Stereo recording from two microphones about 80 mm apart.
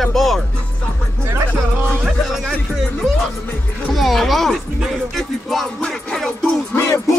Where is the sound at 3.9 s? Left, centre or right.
Centre.